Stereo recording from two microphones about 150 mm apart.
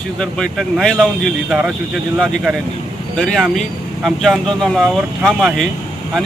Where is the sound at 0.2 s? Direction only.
5° left (ahead or behind).